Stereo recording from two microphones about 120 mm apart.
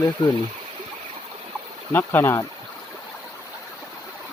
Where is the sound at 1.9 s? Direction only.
15° left (ahead or behind).